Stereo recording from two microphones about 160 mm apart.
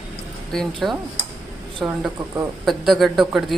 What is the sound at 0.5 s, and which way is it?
Speech, centre (ahead or behind).